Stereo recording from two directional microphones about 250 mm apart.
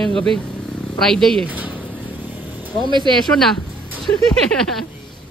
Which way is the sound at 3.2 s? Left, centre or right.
Centre.